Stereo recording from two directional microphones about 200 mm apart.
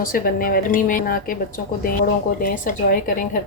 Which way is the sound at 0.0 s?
45° left (ahead or behind).